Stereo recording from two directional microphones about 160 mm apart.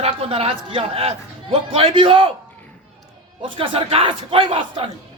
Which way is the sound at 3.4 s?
30° right (ahead or behind).